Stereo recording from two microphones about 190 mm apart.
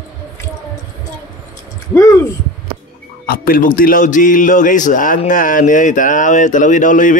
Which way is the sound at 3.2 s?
50° left (ahead or behind).